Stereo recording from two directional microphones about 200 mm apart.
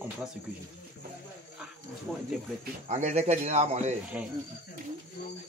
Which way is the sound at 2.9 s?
35° right (ahead or behind).